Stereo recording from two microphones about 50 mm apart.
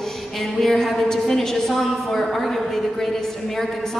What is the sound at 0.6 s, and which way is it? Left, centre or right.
A woman's voice, centre.